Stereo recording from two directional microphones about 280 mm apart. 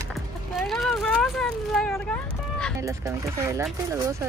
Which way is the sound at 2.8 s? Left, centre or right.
Centre.